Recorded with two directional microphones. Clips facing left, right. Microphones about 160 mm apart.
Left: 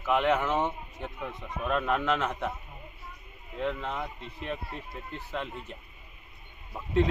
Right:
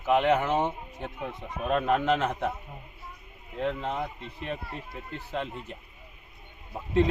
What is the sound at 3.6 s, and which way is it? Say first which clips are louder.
Speech: right 2 dB; 35° right (ahead or behind).